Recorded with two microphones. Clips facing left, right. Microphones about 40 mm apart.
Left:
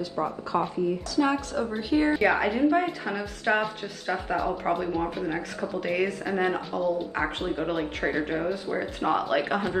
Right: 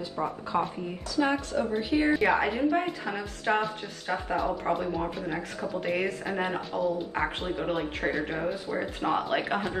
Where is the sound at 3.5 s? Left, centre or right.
Left.